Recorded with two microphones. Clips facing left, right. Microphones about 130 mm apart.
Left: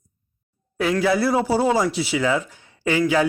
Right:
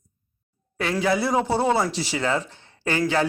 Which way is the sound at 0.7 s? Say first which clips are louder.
Left 3 dB; centre (ahead or behind).